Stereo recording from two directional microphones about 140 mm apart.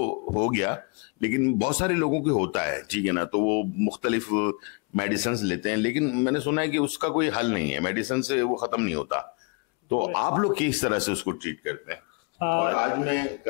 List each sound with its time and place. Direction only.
0.1 s speech: 20° left (ahead or behind)